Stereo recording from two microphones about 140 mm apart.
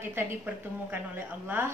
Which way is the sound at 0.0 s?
15° right (ahead or behind).